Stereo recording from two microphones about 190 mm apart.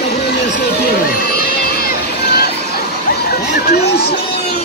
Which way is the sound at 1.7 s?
55° left (ahead or behind).